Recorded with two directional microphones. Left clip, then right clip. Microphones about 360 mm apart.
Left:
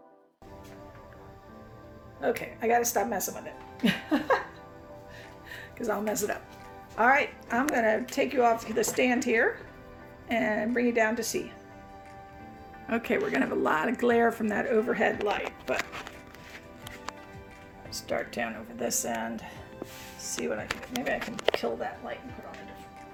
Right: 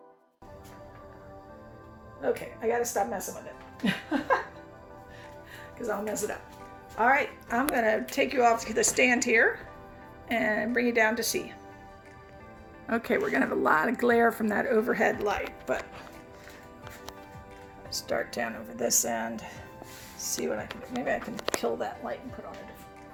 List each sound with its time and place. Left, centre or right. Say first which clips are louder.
2.2 s speech: left 1 dB; left
3.8 s music: left 1 dB; left
5.5 s speech: left 2 dB; left
6.9 s speech: left 1 dB; centre
12.9 s speech: right 1 dB; centre
17.9 s speech: right 1 dB; centre
20.1 s music: right 1 dB; centre
21.6 s speech: right 1 dB; centre